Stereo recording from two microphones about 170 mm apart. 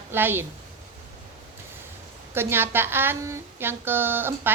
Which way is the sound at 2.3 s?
15° right (ahead or behind).